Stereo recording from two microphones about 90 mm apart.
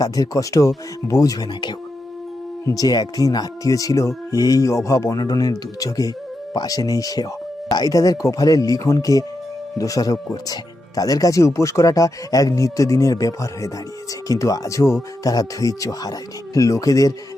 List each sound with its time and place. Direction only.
0.0 s speech: 40° left (ahead or behind)
2.6 s speech: 45° left (ahead or behind)